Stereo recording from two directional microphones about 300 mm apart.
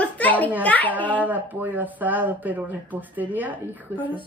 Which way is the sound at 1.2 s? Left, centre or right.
Centre.